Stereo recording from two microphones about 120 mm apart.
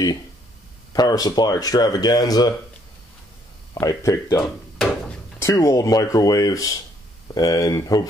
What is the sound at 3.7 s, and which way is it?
Speech, 30° left (ahead or behind).